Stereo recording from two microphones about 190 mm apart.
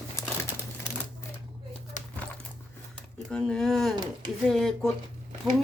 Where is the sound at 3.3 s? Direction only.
5° left (ahead or behind).